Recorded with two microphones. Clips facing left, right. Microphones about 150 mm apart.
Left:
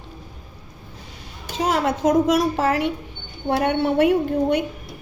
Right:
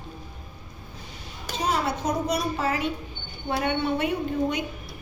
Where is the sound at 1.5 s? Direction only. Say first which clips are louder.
Left 5 dB; 90° left; by 4.6 s 70° left (ahead or behind).